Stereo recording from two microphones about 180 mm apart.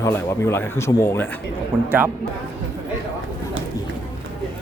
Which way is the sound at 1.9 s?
10° right (ahead or behind).